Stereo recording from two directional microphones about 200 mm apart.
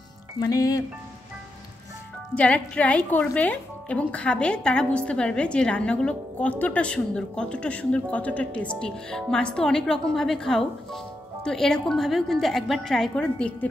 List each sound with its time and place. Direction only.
0.4 s speech: 15° left (ahead or behind)
2.3 s a woman's voice: 5° left (ahead or behind)